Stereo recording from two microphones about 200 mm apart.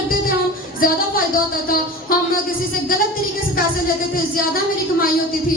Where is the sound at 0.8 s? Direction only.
45° left (ahead or behind).